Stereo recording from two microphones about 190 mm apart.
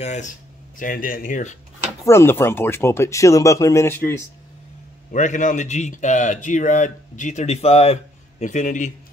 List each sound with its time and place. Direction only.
0.0 s speech: 40° left (ahead or behind)
2.0 s speech: 15° left (ahead or behind)
5.1 s speech: 40° left (ahead or behind)